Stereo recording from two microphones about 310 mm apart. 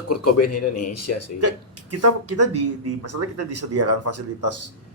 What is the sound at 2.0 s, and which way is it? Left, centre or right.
Speech, right.